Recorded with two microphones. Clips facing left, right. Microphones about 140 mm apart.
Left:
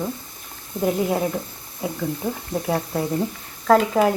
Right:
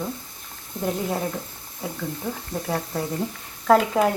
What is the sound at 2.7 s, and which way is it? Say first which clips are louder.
Speech: left 4 dB; 10° left (ahead or behind).